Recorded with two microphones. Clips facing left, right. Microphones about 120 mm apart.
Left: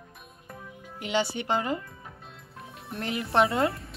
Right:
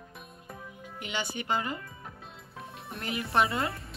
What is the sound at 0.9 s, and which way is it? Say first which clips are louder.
Speech: left 7 dB; 90° left.